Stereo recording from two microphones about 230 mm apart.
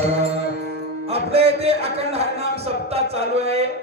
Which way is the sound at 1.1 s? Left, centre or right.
Right.